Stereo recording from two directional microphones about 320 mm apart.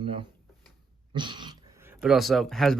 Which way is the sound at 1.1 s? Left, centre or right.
Centre.